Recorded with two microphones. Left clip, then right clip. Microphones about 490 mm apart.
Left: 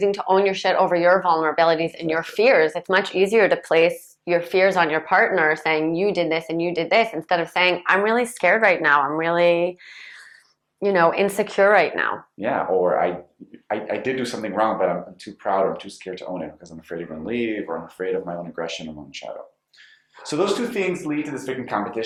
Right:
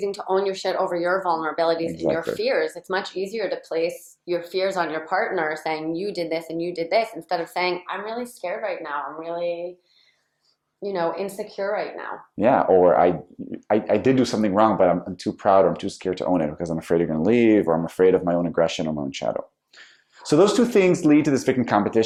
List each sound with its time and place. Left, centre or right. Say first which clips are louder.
0.3 s speech: left 3 dB; left
10.8 s speech: left 7 dB; left
12.4 s speech: right 5 dB; right
20.2 s speech: right 6 dB; right
20.7 s speech: right 9 dB; right
21.2 s speech: right 7 dB; right